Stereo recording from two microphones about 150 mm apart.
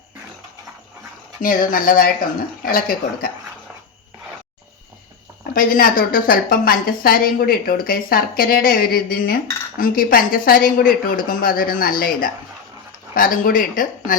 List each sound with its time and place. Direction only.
1.4 s a woman's voice: 70° left (ahead or behind)
2.6 s a woman's voice: 85° left
5.5 s a woman's voice: 70° left (ahead or behind)